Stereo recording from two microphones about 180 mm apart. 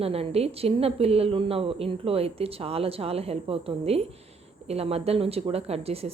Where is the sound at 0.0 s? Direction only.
35° right (ahead or behind).